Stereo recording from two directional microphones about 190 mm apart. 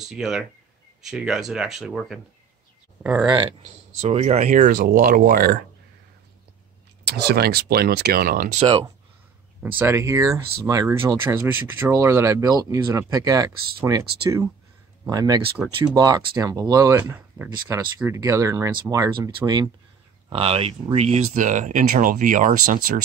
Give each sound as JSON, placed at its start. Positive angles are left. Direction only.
{"t": 0.1, "sound": "speech", "side_deg": -5}
{"t": 3.3, "sound": "speech", "side_deg": -20}
{"t": 4.0, "sound": "speech", "side_deg": -35}
{"t": 7.1, "sound": "speech", "side_deg": -60}
{"t": 8.5, "sound": "speech", "side_deg": -30}
{"t": 9.6, "sound": "speech", "side_deg": -10}